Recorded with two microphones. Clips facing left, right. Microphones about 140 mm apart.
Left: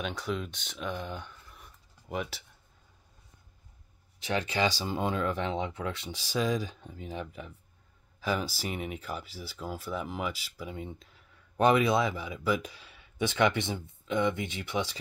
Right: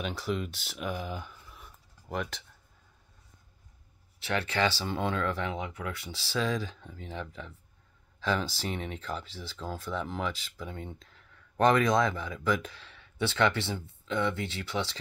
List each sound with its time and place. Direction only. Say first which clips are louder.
0.0 s speech: right 1 dB; centre (ahead or behind)
4.2 s speech: even; 15° left (ahead or behind)